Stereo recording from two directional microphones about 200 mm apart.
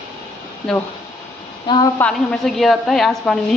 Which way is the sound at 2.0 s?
Centre (ahead or behind).